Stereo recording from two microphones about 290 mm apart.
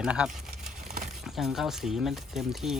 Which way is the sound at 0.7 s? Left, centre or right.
Right.